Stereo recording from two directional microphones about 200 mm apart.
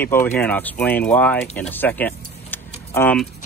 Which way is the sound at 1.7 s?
10° left (ahead or behind).